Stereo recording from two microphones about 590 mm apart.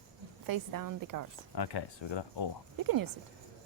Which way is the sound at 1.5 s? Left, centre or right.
Left.